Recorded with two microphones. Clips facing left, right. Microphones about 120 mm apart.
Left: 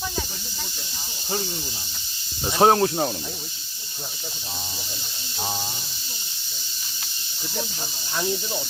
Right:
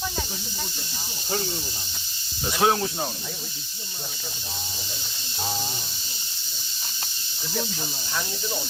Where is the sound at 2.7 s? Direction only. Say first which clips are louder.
Left 7 dB; 65° left (ahead or behind).